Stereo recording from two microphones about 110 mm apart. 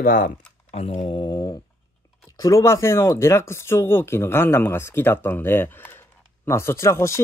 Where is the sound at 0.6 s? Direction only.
70° left (ahead or behind); by 1.6 s 35° left (ahead or behind).